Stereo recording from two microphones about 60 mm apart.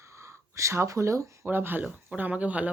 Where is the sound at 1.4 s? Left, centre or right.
Right.